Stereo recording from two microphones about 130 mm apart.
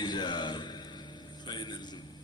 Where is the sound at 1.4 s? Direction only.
35° left (ahead or behind).